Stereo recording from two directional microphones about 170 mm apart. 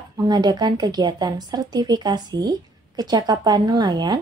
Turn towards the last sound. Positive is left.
turn(degrees=-25)  # may be behind; listen again after turning